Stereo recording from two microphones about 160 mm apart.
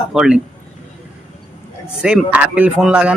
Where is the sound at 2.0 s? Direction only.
5° right (ahead or behind).